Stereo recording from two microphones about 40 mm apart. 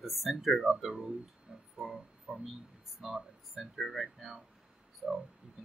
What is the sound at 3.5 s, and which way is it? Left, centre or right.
Speech, centre.